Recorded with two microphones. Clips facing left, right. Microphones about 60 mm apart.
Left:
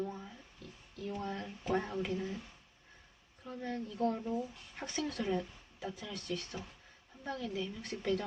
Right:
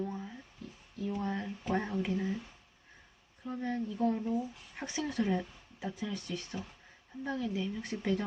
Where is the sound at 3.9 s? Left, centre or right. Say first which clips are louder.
Right 2 dB; centre.